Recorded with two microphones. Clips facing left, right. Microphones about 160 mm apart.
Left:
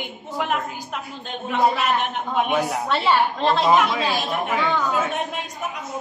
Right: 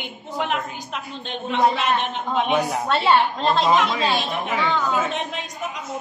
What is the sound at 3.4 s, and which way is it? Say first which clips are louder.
Speech: left 1 dB; 5° left (ahead or behind).